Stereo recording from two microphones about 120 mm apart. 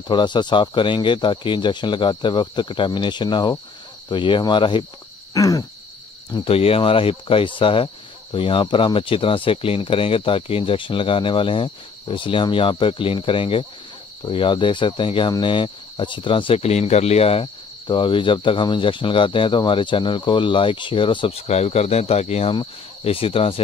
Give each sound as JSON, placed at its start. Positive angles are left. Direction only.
{"t": 0.1, "sound": "speech", "side_deg": 40}
{"t": 5.3, "sound": "hoot", "side_deg": 30}
{"t": 6.3, "sound": "cricket", "side_deg": 50}